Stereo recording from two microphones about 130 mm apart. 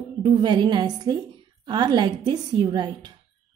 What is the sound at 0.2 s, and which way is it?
A woman's voice, 35° right (ahead or behind).